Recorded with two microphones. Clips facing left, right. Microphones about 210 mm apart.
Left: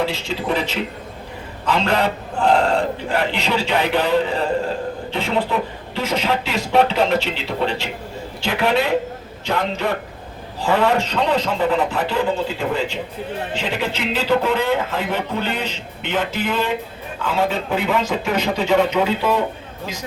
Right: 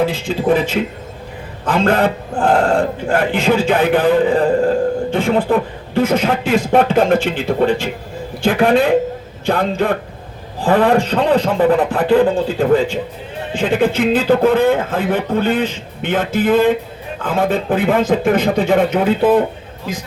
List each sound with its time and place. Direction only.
0.0 s speech: 50° right (ahead or behind)